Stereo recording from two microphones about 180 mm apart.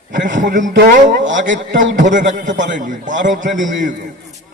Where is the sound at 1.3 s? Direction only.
90° right.